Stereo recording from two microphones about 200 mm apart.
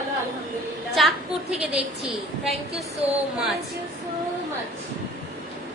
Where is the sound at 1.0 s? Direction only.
Centre (ahead or behind).